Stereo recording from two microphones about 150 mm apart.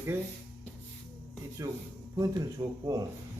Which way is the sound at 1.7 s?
20° right (ahead or behind).